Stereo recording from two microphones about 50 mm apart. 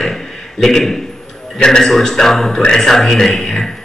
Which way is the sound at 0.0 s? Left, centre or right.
Centre.